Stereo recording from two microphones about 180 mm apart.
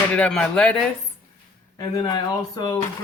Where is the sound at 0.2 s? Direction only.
5° left (ahead or behind).